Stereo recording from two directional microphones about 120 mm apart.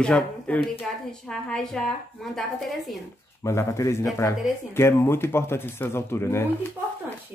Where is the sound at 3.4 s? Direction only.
25° left (ahead or behind).